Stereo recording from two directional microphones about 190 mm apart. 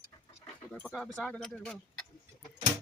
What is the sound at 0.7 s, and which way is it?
Speech, 5° left (ahead or behind).